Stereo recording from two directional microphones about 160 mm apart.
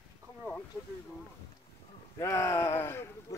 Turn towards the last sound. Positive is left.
turn(degrees=15)  # may be behind; listen again after turning